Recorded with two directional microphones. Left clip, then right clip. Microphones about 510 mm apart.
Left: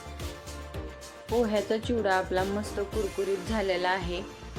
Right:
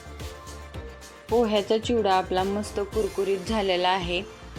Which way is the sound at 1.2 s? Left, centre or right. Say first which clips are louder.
Right 4 dB; centre.